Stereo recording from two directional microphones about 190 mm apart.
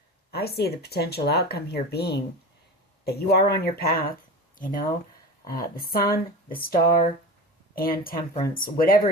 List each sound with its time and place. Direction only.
0.3 s speech: 55° left (ahead or behind)